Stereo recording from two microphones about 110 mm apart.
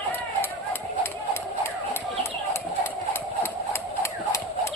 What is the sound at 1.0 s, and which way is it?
Chicken, 20° left (ahead or behind).